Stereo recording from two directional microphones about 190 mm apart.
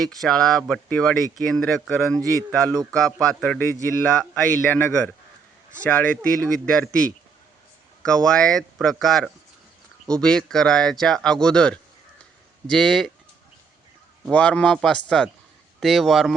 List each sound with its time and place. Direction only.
0.0 s speech: centre (ahead or behind)
4.7 s a man's voice: 5° left (ahead or behind)
14.3 s speech: 5° left (ahead or behind)